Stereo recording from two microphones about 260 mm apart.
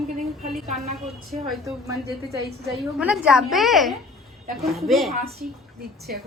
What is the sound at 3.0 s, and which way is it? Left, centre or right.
A woman's voice, centre.